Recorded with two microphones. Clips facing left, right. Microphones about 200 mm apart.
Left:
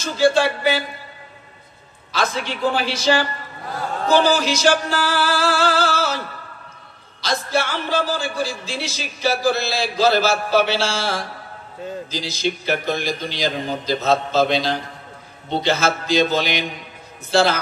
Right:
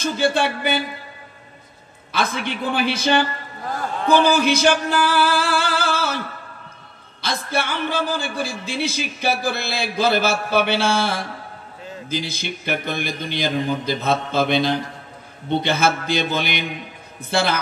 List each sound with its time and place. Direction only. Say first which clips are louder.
0.0 s a man's voice: left 3 dB; 55° right (ahead or behind)
2.1 s a man's voice: even; 55° right (ahead or behind)